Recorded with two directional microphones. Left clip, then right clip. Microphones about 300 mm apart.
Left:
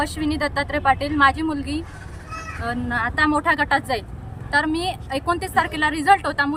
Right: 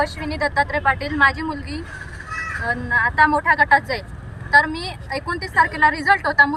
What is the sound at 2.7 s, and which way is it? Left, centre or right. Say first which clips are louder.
Speech: right 4 dB; centre.